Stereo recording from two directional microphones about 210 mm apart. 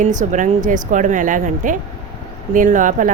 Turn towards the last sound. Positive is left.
turn(degrees=-40)  # may be behind; listen again after turning